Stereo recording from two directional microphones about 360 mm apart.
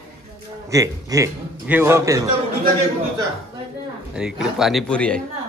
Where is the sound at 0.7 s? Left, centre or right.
Centre.